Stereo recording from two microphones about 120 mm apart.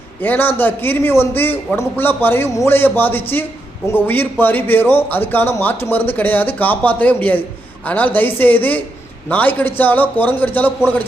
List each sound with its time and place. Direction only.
0.2 s speech: 15° left (ahead or behind)